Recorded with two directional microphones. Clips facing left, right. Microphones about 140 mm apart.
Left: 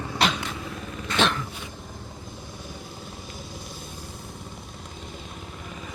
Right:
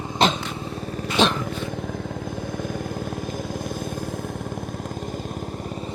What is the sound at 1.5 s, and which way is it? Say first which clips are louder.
Vehicle: right 11 dB; 70° right (ahead or behind).